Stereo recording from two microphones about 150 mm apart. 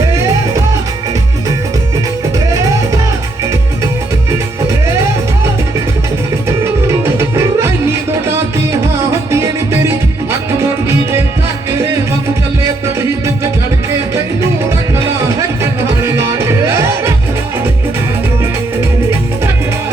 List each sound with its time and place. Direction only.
0.1 s music: 20° right (ahead or behind)
2.5 s music: 20° right (ahead or behind)
4.3 s music: 20° right (ahead or behind)
6.8 s music: 15° right (ahead or behind)
9.3 s music: 15° right (ahead or behind)
12.8 s music: 20° right (ahead or behind)
14.9 s music: 20° right (ahead or behind)